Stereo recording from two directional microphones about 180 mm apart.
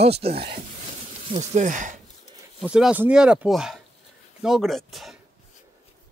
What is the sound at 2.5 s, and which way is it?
Speech, 5° right (ahead or behind).